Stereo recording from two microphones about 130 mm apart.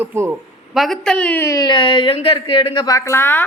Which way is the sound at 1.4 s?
30° left (ahead or behind).